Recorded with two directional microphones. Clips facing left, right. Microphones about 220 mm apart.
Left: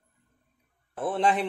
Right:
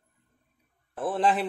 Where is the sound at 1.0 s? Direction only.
Centre (ahead or behind).